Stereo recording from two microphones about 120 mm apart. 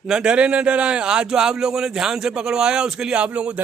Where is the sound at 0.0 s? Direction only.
5° right (ahead or behind).